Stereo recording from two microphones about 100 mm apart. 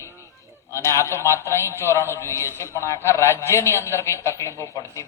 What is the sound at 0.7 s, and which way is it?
A man's voice, 30° left (ahead or behind).